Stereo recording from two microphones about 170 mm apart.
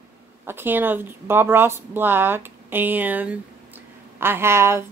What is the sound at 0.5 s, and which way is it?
Speech, 10° right (ahead or behind).